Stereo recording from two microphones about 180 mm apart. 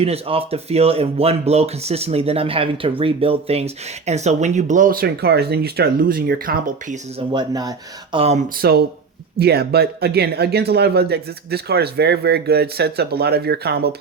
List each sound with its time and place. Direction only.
0.0 s speech: 35° right (ahead or behind)
7.3 s speech: 20° right (ahead or behind)
8.5 s speech: 60° right (ahead or behind)